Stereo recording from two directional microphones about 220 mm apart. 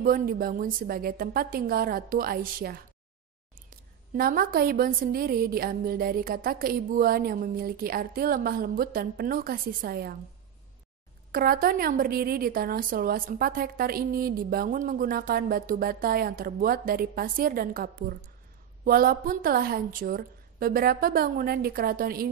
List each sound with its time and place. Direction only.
0.0 s a woman's voice: 40° right (ahead or behind)
4.1 s a woman's voice: 40° right (ahead or behind)
11.3 s a woman's voice: 40° right (ahead or behind)